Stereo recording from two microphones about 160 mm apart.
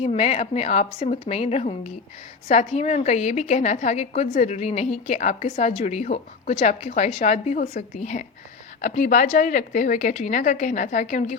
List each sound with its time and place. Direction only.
0.0 s a woman's voice: 40° left (ahead or behind)